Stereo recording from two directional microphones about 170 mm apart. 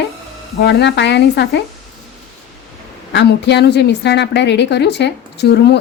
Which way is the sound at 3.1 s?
85° left.